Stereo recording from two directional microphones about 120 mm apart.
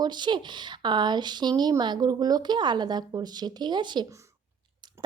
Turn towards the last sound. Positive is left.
turn(degrees=-40)  # may be behind; listen again after turning